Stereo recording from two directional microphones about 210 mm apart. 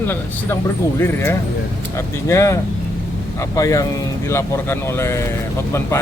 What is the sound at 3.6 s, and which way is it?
Speech, 15° left (ahead or behind).